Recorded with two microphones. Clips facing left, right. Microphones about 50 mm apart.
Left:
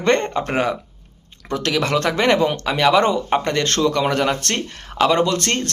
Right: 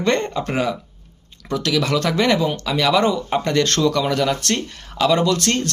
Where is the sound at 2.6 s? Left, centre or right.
Left.